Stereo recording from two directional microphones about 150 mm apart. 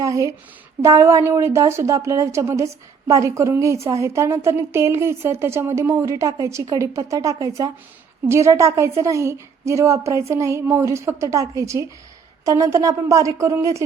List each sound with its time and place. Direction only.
0.0 s a woman's voice: 20° right (ahead or behind)